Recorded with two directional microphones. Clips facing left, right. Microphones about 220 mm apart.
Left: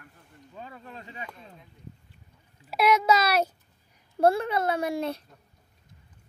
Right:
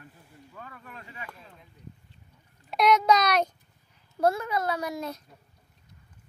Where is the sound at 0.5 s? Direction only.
25° left (ahead or behind).